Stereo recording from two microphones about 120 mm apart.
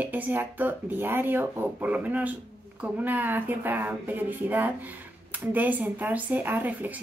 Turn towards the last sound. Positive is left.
turn(degrees=-15)  # may be behind; listen again after turning